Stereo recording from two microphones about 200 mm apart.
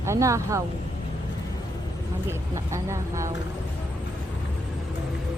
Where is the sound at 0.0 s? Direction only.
15° right (ahead or behind).